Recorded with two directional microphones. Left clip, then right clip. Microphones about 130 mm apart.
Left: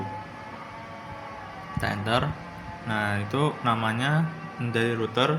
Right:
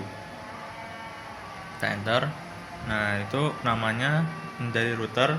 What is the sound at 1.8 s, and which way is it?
Speech, 10° left (ahead or behind).